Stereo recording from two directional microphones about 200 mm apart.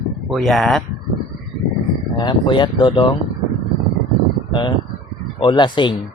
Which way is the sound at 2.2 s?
25° left (ahead or behind).